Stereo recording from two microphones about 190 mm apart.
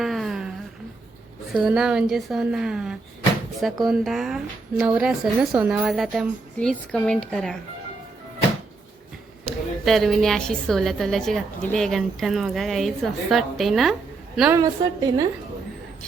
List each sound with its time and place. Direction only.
0.0 s a sound: centre (ahead or behind)
1.5 s a woman's voice: 5° right (ahead or behind)
9.5 s a woman's voice: centre (ahead or behind)
14.5 s a woman's voice: 20° right (ahead or behind)